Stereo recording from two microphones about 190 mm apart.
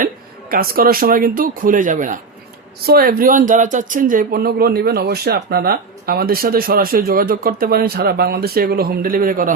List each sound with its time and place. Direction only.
0.5 s speech: 50° right (ahead or behind)